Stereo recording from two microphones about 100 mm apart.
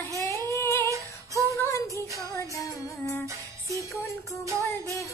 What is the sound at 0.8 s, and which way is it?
Female singing, 30° right (ahead or behind).